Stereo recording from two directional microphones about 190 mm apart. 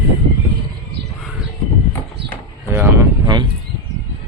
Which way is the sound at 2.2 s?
60° right (ahead or behind).